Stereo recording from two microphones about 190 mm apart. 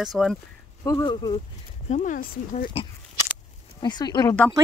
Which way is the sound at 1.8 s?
40° left (ahead or behind).